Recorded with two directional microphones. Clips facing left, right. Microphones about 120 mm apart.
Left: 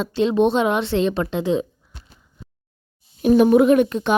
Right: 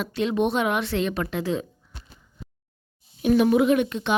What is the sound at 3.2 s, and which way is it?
Speech, 40° left (ahead or behind).